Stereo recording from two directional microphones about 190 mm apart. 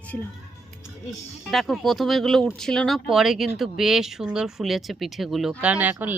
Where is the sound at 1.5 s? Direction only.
Centre (ahead or behind).